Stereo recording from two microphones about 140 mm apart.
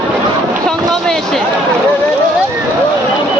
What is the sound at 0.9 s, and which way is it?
Speech, centre (ahead or behind).